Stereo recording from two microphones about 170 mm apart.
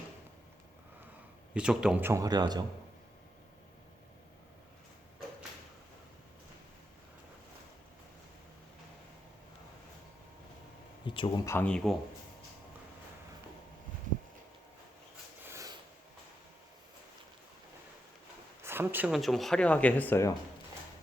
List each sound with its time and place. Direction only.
1.5 s speech: 5° right (ahead or behind); by 2.6 s 25° right (ahead or behind)
11.0 s a sound: 30° left (ahead or behind)
11.4 s speech: 10° left (ahead or behind)
18.6 s speech: 15° right (ahead or behind); by 20.3 s 15° left (ahead or behind)